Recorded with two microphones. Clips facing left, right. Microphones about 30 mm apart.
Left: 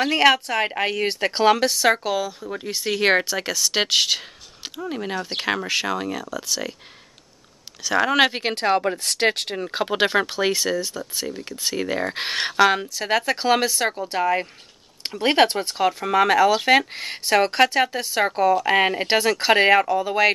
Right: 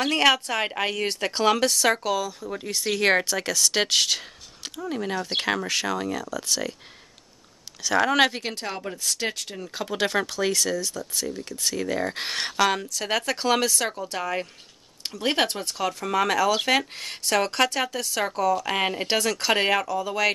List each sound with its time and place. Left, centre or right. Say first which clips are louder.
0.0 s speech: left 3 dB; centre
7.8 s speech: left 2 dB; centre
8.3 s speech: left 10 dB; left
9.8 s speech: left 5 dB; left
15.1 s speech: left 6 dB; left